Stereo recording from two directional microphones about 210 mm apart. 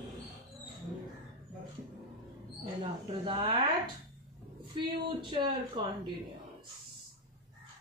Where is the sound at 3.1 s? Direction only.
25° right (ahead or behind).